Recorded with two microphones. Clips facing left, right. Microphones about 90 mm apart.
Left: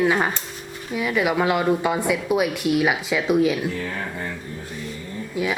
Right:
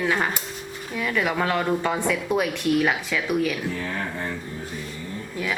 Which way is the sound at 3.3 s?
20° left (ahead or behind).